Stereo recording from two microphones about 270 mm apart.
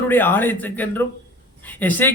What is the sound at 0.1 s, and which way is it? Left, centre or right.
Speech, centre.